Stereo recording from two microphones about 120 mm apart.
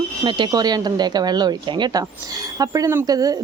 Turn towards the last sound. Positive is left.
turn(degrees=-30)  # may be behind; listen again after turning